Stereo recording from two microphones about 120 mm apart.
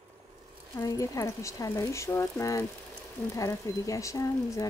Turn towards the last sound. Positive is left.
turn(degrees=25)  # may be behind; listen again after turning